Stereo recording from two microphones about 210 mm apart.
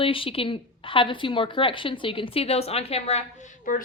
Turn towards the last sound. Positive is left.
turn(degrees=40)  # may be behind; listen again after turning